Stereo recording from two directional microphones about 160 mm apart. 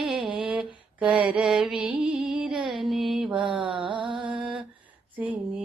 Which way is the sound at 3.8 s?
30° right (ahead or behind).